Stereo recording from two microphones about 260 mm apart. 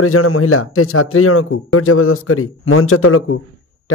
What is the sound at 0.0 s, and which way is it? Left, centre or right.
A man's voice, left.